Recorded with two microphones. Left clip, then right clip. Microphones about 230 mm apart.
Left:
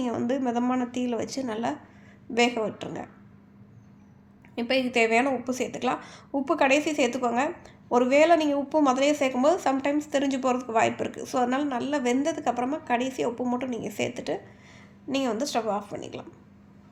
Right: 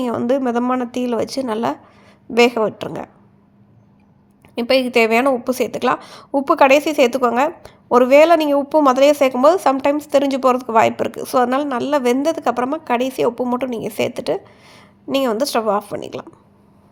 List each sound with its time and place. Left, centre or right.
0.0 s a woman's voice: right
4.5 s a woman's voice: right